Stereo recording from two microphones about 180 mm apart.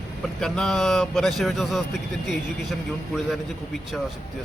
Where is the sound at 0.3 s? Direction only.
5° left (ahead or behind).